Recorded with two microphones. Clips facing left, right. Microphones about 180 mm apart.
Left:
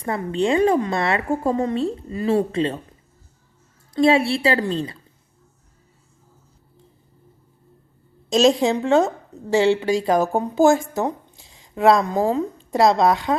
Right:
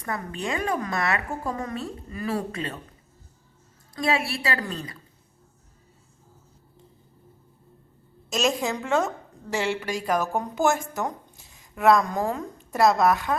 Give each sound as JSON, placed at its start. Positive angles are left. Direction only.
{"t": 0.0, "sound": "a woman's voice", "side_deg": 25}
{"t": 3.9, "sound": "a woman's voice", "side_deg": 25}
{"t": 8.3, "sound": "a woman's voice", "side_deg": 30}